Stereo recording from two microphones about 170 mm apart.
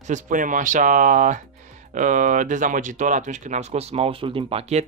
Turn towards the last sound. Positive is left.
turn(degrees=-35)  # may be behind; listen again after turning